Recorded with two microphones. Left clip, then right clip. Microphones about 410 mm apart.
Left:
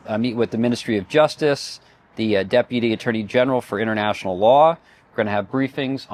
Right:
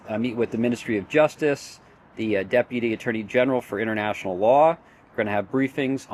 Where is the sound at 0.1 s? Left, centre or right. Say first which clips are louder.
Left 4 dB; left.